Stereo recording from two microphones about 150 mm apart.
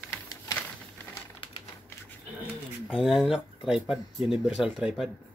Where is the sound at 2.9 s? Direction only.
Centre (ahead or behind).